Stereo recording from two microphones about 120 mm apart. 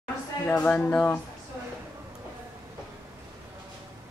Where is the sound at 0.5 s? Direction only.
15° left (ahead or behind).